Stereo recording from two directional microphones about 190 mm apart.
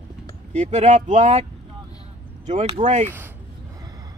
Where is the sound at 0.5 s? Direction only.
40° right (ahead or behind).